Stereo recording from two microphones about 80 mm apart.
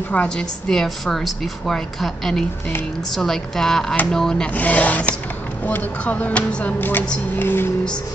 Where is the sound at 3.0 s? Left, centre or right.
Centre; by 7.7 s left.